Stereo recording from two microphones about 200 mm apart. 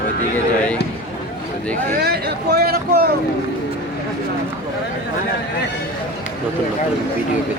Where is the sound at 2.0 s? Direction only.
55° right (ahead or behind).